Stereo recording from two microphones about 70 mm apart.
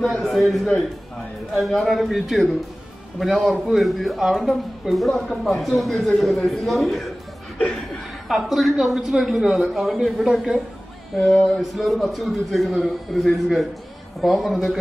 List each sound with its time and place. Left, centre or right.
0.0 s a man's voice: centre
7.5 s chuckle: centre
8.3 s a man's voice: centre
11.1 s a man's voice: centre